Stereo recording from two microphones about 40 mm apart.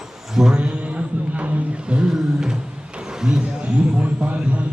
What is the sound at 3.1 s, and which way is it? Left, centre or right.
Vehicle, centre.